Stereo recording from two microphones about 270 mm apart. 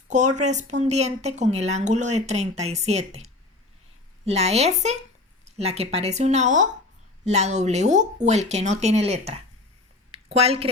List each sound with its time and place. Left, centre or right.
0.1 s speech: right
4.3 s speech: right
10.1 s a sound: right